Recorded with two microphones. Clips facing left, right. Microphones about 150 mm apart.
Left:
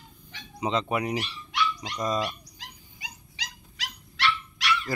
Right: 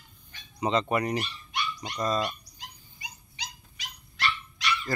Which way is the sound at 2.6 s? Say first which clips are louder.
Left 1 dB; 90° left.